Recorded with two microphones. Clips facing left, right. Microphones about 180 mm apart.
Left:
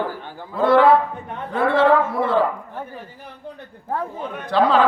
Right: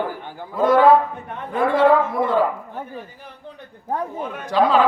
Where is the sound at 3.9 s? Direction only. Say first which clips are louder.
Right 1 dB; 15° right (ahead or behind).